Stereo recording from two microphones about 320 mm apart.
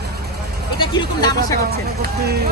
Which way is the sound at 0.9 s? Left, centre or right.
Centre.